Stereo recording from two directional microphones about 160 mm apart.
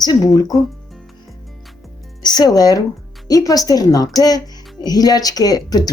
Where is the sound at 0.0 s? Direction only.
25° left (ahead or behind).